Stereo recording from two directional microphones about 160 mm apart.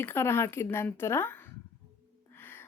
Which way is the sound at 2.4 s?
15° left (ahead or behind).